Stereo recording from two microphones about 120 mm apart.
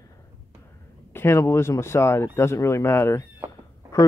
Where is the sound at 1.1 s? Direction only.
20° left (ahead or behind).